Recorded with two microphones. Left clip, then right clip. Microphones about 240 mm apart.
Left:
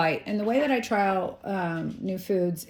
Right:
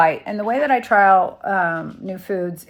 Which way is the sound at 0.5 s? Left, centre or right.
Centre.